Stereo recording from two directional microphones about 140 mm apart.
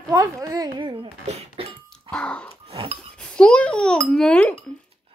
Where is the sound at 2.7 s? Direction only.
45° right (ahead or behind).